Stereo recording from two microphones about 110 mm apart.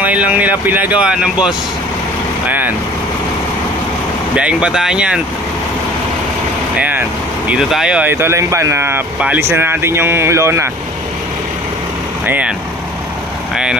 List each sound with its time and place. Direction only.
0.0 s speech: 15° right (ahead or behind)
4.4 s speech: 10° right (ahead or behind)
6.8 s speech: 15° right (ahead or behind)
8.1 s speech: 25° right (ahead or behind)
12.3 s speech: 10° right (ahead or behind)